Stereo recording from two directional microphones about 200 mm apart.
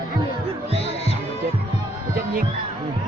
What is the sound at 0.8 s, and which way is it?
Music, 30° left (ahead or behind).